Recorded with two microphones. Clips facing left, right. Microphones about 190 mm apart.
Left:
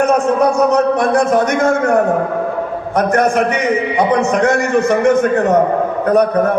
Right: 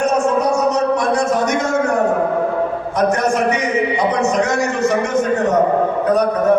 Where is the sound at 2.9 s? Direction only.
55° left (ahead or behind).